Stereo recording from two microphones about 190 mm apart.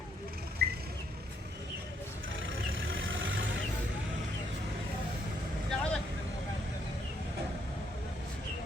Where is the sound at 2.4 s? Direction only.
90° right.